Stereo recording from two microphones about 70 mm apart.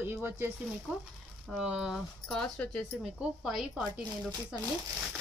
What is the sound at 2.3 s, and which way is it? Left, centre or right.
Speech, centre.